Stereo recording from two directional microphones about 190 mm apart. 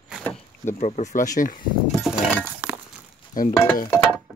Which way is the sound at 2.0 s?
10° right (ahead or behind).